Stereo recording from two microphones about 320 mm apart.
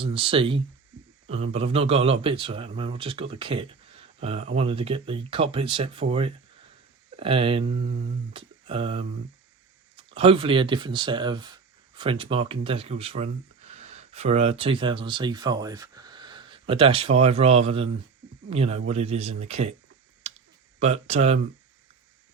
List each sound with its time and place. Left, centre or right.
0.0 s speech: centre
20.7 s speech: centre